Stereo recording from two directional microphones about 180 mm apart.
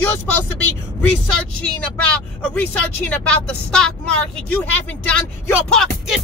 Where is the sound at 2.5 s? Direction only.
10° left (ahead or behind).